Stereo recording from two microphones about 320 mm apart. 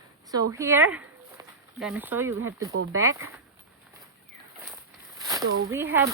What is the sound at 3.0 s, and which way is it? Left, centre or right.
Speech, centre.